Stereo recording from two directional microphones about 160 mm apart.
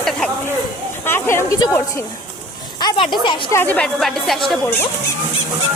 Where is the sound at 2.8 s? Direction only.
25° left (ahead or behind).